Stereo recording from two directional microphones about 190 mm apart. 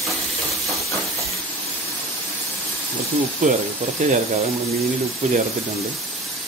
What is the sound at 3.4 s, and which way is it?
Speech, 40° right (ahead or behind).